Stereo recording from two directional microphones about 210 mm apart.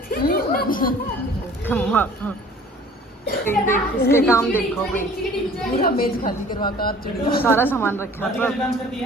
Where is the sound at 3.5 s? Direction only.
10° left (ahead or behind).